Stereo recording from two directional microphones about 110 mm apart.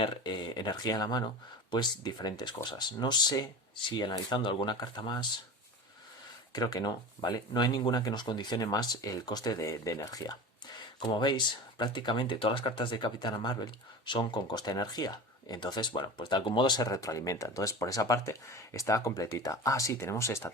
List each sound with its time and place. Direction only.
0.0 s speech: 40° left (ahead or behind)
6.5 s speech: 40° left (ahead or behind)
11.0 s speech: 45° left (ahead or behind); by 20.5 s 25° left (ahead or behind)